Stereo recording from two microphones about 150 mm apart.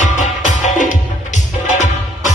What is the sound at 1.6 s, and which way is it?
Music, 55° left (ahead or behind).